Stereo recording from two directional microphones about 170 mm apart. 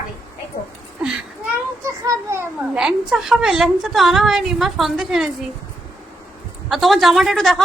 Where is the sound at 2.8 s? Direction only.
5° right (ahead or behind).